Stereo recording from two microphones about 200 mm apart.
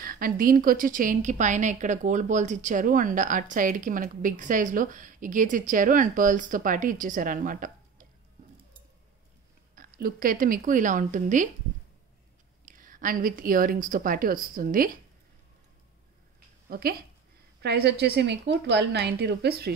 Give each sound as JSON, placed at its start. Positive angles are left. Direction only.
{"t": 0.0, "sound": "a woman's voice", "side_deg": -45}
{"t": 9.8, "sound": "a woman's voice", "side_deg": -45}
{"t": 12.6, "sound": "a woman's voice", "side_deg": -45}
{"t": 16.6, "sound": "a woman's voice", "side_deg": -50}